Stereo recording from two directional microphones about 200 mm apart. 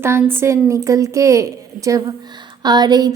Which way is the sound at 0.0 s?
10° right (ahead or behind).